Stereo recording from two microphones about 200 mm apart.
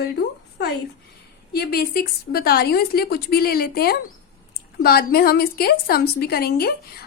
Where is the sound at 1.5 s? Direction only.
50° left (ahead or behind).